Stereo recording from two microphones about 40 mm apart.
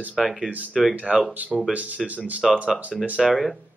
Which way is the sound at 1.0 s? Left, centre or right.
Right.